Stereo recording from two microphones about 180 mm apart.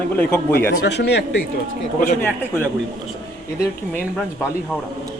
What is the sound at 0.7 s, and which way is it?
Speech, 65° left (ahead or behind).